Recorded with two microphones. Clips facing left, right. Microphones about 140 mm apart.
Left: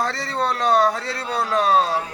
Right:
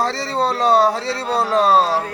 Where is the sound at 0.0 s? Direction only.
30° right (ahead or behind).